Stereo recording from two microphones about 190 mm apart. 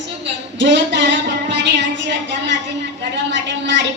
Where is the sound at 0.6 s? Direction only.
70° right (ahead or behind).